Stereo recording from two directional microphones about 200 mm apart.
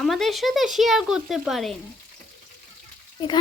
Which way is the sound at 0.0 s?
Centre (ahead or behind).